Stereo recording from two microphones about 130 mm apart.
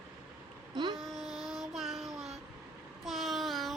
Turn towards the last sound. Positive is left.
turn(degrees=0)  # may be behind; listen again after turning